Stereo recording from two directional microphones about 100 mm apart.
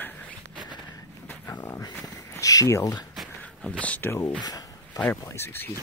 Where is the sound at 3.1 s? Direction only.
Centre (ahead or behind).